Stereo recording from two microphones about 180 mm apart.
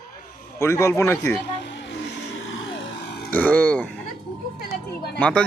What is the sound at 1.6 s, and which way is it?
Vehicle, 85° left.